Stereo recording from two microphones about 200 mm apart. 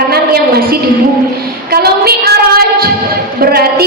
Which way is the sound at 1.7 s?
50° right (ahead or behind).